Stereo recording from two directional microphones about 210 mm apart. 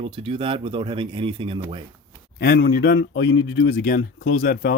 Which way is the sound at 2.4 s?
50° left (ahead or behind).